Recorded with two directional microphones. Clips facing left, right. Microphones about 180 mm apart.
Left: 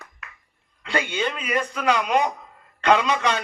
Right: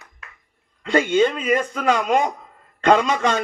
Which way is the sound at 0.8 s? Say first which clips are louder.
Right 8 dB; 45° right (ahead or behind).